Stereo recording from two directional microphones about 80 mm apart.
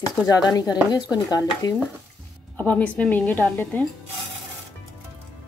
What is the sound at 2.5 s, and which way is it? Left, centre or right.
A woman's voice, centre.